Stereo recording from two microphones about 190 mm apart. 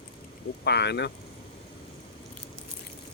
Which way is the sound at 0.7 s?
60° left (ahead or behind).